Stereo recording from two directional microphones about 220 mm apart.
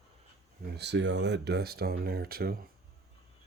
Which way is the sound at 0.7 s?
50° right (ahead or behind).